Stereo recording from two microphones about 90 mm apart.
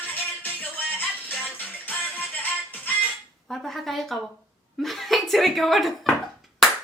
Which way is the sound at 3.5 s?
5° left (ahead or behind).